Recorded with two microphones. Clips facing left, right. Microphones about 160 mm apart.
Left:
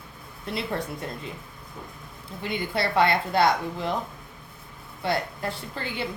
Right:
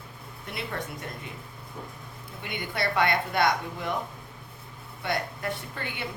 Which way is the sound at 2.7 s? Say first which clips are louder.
Left 3 dB; 25° left (ahead or behind).